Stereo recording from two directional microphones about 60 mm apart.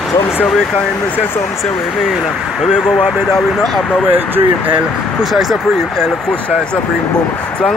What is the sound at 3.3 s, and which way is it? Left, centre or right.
Speech, centre.